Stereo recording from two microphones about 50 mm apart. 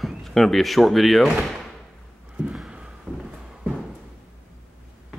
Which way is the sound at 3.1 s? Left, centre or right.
Right.